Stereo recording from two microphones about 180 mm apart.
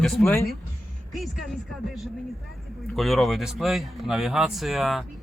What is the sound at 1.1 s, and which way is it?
Speech, centre (ahead or behind).